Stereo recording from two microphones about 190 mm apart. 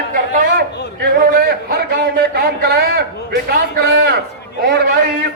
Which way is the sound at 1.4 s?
55° right (ahead or behind).